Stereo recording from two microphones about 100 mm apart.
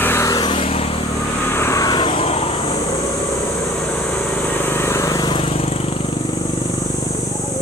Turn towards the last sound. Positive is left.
turn(degrees=70)  # may be behind; listen again after turning